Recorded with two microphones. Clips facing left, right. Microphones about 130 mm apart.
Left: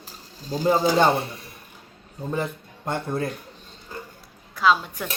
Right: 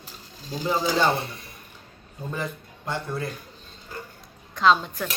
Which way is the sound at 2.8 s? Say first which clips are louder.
Left 3 dB; 50° left (ahead or behind).